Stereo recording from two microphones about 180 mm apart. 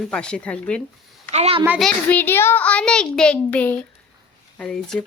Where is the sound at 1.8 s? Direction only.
5° left (ahead or behind).